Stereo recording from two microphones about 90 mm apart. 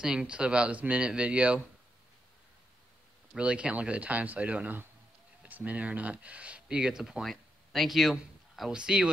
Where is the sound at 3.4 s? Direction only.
15° right (ahead or behind).